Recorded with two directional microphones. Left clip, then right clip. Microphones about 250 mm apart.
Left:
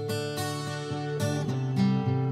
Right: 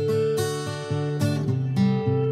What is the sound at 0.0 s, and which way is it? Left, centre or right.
Music, centre.